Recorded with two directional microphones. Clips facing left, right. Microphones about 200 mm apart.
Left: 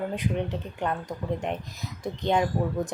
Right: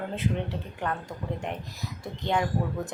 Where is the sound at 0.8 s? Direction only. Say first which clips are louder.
Left 3 dB; 20° left (ahead or behind).